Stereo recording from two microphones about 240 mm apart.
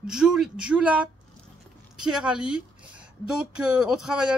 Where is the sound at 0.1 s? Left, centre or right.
Centre.